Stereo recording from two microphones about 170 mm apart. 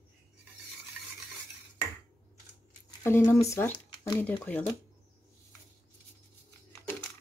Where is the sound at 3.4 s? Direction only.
15° left (ahead or behind).